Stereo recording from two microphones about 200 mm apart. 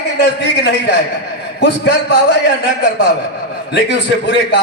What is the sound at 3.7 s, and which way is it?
Speech, 55° left (ahead or behind).